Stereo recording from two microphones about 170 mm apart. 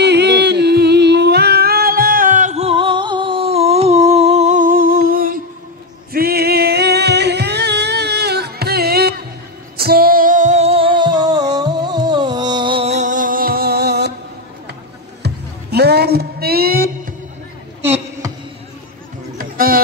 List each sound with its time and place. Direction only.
0.0 s humming: 80° right; by 5.4 s 60° right (ahead or behind)
6.1 s music: 65° right (ahead or behind)
15.2 s music: 70° right (ahead or behind)
17.8 s a sound: 15° right (ahead or behind)
19.3 s music: 60° right (ahead or behind)